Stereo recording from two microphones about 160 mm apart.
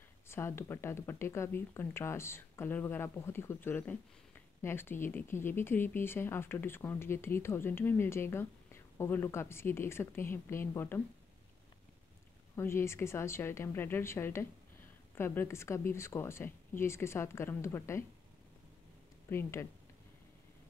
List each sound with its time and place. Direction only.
0.3 s speech: 15° left (ahead or behind)
12.5 s speech: 15° left (ahead or behind)
19.2 s speech: 15° left (ahead or behind)